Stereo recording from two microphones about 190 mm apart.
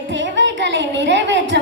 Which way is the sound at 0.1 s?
70° right (ahead or behind).